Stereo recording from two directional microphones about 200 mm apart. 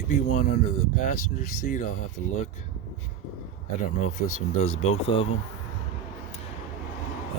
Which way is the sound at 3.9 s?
35° left (ahead or behind).